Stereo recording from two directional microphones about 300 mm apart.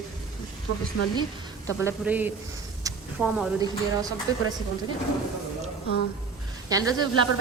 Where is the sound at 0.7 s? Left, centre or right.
Left.